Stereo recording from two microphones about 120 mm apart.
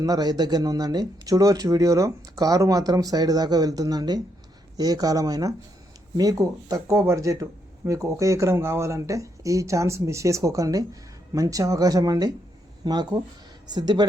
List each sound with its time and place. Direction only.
0.0 s speech: 35° right (ahead or behind)